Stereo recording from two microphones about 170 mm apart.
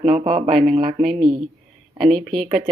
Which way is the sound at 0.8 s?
55° right (ahead or behind).